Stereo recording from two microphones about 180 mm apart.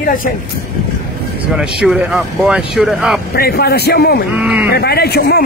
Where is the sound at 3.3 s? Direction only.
60° left (ahead or behind).